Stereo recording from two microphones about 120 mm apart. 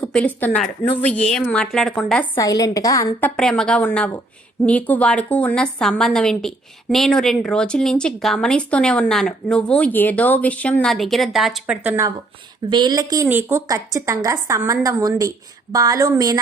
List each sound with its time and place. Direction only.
0.0 s a woman's voice: 10° left (ahead or behind)
2.3 s a woman's voice: 30° left (ahead or behind)
3.2 s a woman's voice: 10° left (ahead or behind); by 11.9 s 10° right (ahead or behind)
12.6 s a woman's voice: 40° right (ahead or behind)
13.2 s speech: 15° right (ahead or behind)
13.7 s a woman's voice: 30° right (ahead or behind)